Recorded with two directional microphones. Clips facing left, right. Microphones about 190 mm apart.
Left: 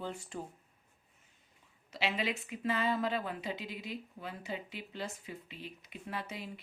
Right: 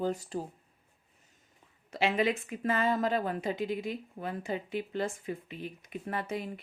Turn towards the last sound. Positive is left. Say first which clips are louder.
# right 7 dB
turn(degrees=-50)  # may be behind; listen again after turning